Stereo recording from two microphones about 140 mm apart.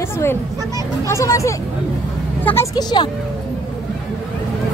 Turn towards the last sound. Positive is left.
turn(degrees=30)  # may be behind; listen again after turning